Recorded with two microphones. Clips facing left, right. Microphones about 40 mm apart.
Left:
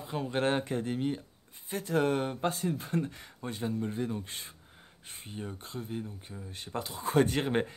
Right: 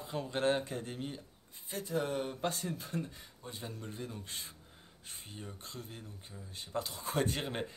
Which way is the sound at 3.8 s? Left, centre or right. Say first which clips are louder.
Left 9 dB; left.